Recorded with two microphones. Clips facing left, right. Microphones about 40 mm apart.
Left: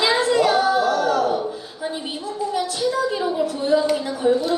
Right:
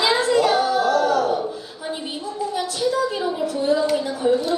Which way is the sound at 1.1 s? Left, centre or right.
Left.